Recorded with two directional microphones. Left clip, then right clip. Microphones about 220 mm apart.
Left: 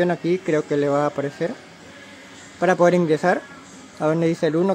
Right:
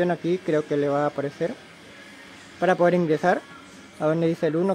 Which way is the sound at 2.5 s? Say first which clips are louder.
Left 3 dB; centre (ahead or behind).